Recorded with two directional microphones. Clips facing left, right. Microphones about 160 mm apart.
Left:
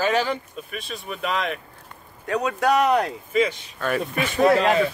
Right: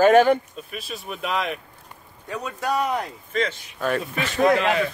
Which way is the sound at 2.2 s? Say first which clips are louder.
Left 6 dB; 70° left (ahead or behind).